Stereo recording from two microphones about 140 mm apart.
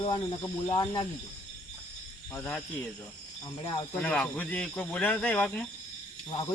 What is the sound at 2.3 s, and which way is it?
Speech, 10° left (ahead or behind).